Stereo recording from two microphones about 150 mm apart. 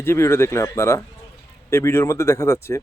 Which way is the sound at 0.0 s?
15° left (ahead or behind).